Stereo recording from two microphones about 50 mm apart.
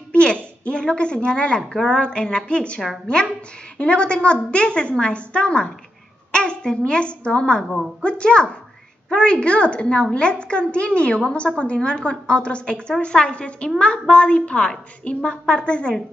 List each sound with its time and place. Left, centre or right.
0.1 s a woman's voice: left
6.3 s a sound: centre
6.9 s a woman's voice: left